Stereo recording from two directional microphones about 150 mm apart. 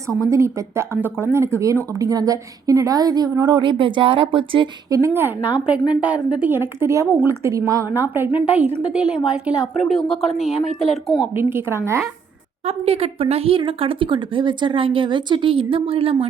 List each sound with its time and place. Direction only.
0.3 s speech: 20° right (ahead or behind); by 4.7 s 35° right (ahead or behind)
4.9 s a woman's voice: 20° right (ahead or behind); by 11.3 s centre (ahead or behind)
11.3 s a woman's voice: 15° right (ahead or behind)
12.6 s speech: 40° right (ahead or behind)